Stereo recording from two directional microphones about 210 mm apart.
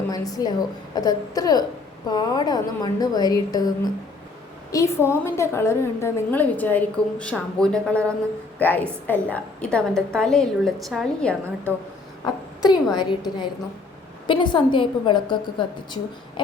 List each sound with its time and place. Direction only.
0.1 s a woman's voice: 15° left (ahead or behind)
4.7 s a woman's voice: 15° left (ahead or behind)
12.2 s a woman's voice: 20° left (ahead or behind)